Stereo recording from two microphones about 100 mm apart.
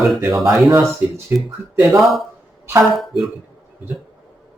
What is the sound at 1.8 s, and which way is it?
Speech, centre (ahead or behind).